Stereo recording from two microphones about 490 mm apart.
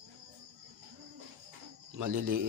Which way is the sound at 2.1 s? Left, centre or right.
Centre.